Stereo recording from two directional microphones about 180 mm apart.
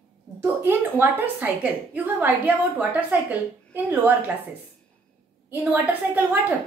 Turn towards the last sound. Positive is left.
turn(degrees=-10)  # may be behind; listen again after turning